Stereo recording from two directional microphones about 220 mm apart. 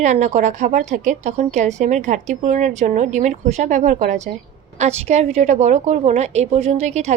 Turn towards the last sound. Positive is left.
turn(degrees=-30)  # may be behind; listen again after turning